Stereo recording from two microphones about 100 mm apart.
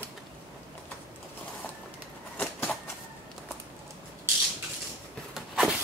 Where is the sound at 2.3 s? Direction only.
15° left (ahead or behind).